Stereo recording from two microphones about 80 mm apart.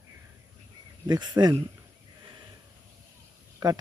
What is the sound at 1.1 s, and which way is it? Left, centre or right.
Speech, right.